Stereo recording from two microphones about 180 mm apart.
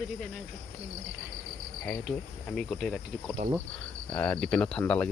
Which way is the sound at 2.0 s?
5° left (ahead or behind).